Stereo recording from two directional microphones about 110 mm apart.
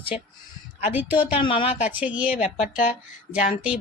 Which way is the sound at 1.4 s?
50° left (ahead or behind).